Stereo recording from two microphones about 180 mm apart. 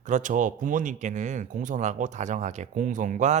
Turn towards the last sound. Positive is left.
turn(degrees=-45)  # may be behind; listen again after turning